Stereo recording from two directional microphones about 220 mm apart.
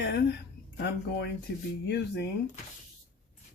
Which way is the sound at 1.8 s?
50° left (ahead or behind).